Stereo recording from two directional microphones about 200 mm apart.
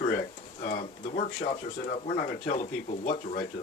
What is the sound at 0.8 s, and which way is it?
Speech, 35° left (ahead or behind).